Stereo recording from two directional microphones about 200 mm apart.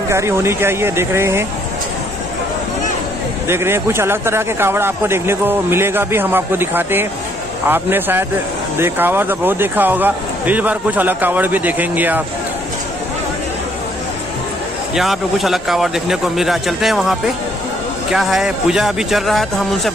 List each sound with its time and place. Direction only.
0.1 s speech: 15° right (ahead or behind)
3.4 s speech: 10° right (ahead or behind)
15.0 s speech: centre (ahead or behind)
18.1 s speech: 5° right (ahead or behind)